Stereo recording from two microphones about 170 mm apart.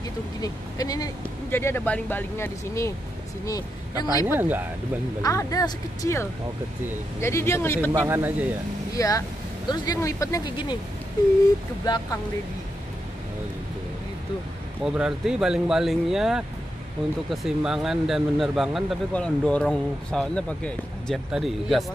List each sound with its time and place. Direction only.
0.4 s speech: 20° left (ahead or behind)
4.1 s speech: 20° left (ahead or behind)
4.4 s a man's voice: 10° right (ahead or behind)
5.2 s speech: 20° left (ahead or behind)
7.9 s a man's voice: 15° right (ahead or behind)
8.9 s speech: 20° left (ahead or behind)
11.8 s speech: 25° left (ahead or behind)
14.8 s speech: 5° right (ahead or behind)